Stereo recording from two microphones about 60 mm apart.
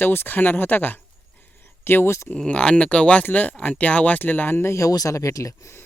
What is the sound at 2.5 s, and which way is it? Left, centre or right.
Speech, centre.